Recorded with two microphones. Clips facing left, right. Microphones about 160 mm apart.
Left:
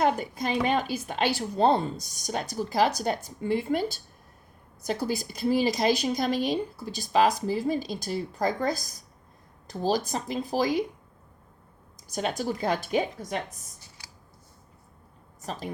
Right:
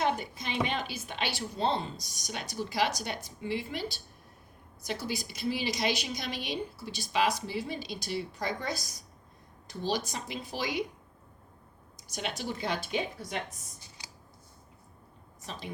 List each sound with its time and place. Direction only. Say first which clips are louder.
0.0 s a woman's voice: left 5 dB; 45° left (ahead or behind)
4.9 s a woman's voice: left 6 dB; 45° left (ahead or behind)
12.1 s a woman's voice: left 7 dB; 40° left (ahead or behind)
15.4 s a woman's voice: left 7 dB; 40° left (ahead or behind)